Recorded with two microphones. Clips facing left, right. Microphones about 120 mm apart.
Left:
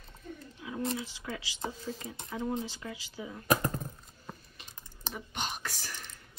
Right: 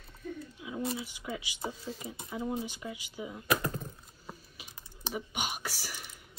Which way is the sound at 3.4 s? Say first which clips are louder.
Left 2 dB; 40° left (ahead or behind).